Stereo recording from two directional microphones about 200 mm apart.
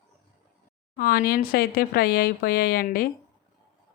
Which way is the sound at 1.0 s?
45° left (ahead or behind).